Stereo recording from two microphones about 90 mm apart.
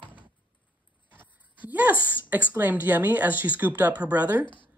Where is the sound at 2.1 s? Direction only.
20° right (ahead or behind).